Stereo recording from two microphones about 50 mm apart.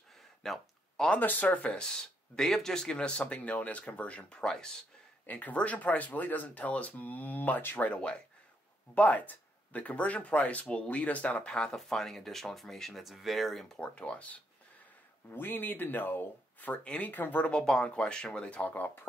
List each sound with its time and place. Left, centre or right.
0.4 s a sound: centre
1.2 s speech: left
1.8 s speech: centre
5.2 s speech: left
7.8 s speech: left
11.4 s speech: centre
13.7 s speech: left
15.3 s speech: left
16.8 s speech: left
17.1 s speech: left
17.5 s speech: centre
18.6 s speech: left